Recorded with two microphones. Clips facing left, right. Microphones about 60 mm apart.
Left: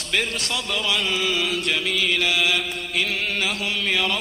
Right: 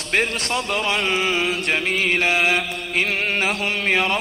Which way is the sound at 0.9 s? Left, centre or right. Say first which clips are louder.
Right 2 dB; right.